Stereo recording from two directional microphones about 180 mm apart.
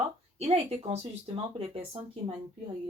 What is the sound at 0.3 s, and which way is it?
Speech, 35° right (ahead or behind).